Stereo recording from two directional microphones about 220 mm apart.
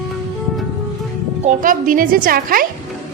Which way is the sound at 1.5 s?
40° right (ahead or behind).